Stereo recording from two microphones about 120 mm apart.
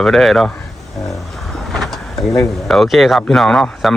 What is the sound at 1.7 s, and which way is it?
Speech, centre (ahead or behind).